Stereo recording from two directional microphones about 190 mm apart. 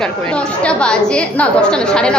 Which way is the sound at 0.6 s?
5° left (ahead or behind).